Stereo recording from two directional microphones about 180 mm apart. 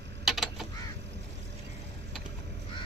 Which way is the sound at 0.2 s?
Centre (ahead or behind).